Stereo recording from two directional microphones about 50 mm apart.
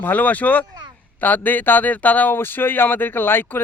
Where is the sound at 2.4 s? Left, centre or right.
Left.